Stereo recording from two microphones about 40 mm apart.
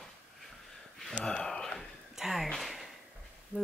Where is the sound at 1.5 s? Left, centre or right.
Centre.